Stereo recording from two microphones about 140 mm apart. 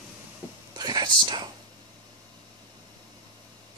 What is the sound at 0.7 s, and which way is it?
Speech, 30° right (ahead or behind).